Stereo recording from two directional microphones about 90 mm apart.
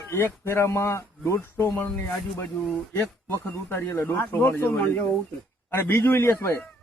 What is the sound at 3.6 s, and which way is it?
Speech, 25° left (ahead or behind).